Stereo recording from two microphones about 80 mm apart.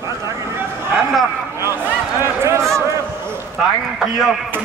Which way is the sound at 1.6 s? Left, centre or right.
Right.